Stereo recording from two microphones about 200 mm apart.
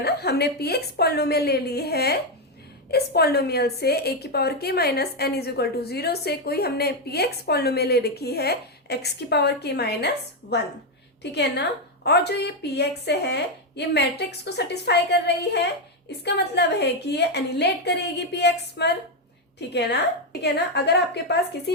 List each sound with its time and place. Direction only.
0.0 s a woman's voice: 55° left (ahead or behind)
11.2 s a woman's voice: 55° left (ahead or behind)